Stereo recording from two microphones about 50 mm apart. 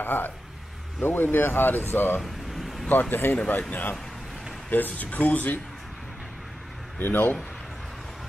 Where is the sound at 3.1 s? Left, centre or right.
Left.